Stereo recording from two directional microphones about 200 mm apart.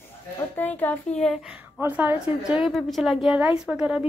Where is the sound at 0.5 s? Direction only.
10° left (ahead or behind).